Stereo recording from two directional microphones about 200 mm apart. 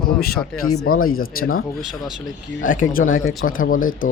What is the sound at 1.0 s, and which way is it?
Speech, 45° left (ahead or behind).